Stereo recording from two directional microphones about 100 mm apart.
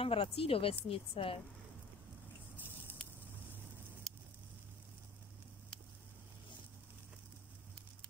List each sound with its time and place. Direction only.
0.0 s a woman's voice: 65° left (ahead or behind)